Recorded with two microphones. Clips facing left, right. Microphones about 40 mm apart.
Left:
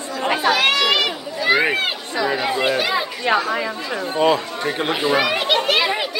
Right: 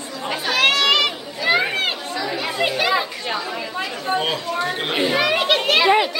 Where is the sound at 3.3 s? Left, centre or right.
Left.